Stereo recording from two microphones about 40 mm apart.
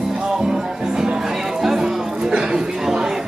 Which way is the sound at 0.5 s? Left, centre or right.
Centre.